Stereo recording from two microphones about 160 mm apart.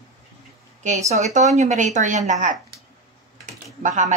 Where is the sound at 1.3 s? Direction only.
45° right (ahead or behind).